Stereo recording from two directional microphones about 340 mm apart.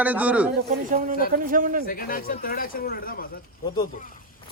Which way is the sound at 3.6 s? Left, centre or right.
Centre.